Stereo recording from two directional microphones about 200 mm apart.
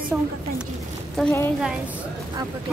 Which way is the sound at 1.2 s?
Centre (ahead or behind).